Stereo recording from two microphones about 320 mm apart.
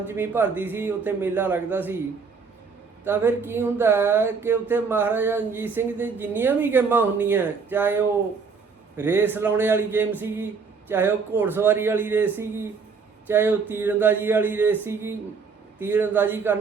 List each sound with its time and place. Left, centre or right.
0.0 s speech: centre
3.0 s speech: centre